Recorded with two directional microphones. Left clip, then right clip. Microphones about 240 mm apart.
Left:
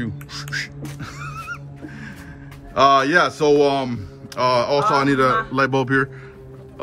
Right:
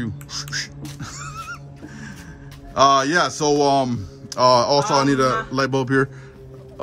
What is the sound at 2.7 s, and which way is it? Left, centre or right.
Speech, centre.